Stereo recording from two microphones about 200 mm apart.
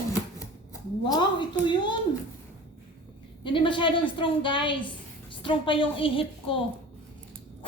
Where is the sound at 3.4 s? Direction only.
25° left (ahead or behind).